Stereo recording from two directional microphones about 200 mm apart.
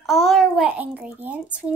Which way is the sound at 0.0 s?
Centre (ahead or behind).